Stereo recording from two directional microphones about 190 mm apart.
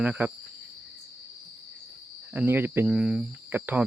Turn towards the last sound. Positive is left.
turn(degrees=-10)  # may be behind; listen again after turning